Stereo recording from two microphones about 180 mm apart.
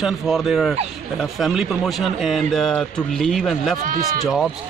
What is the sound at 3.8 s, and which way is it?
Speech, 50° right (ahead or behind).